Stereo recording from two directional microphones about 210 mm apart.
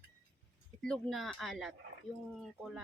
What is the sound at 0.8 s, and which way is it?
A woman's voice, 5° left (ahead or behind).